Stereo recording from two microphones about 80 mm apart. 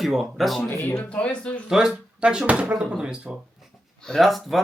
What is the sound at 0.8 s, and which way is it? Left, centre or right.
Speech, left.